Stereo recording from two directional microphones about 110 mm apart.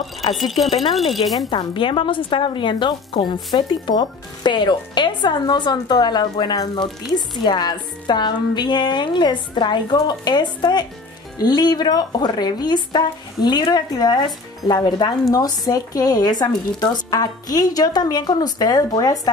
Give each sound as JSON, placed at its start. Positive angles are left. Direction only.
{"t": 0.3, "sound": "speech", "side_deg": 0}
{"t": 1.5, "sound": "speech", "side_deg": 45}